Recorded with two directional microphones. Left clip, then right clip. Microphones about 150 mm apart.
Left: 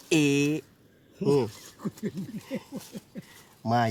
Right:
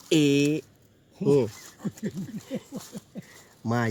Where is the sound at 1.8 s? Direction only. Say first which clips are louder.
Even; 40° right (ahead or behind).